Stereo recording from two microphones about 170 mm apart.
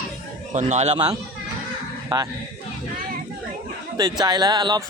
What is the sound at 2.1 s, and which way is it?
Speech, 25° right (ahead or behind).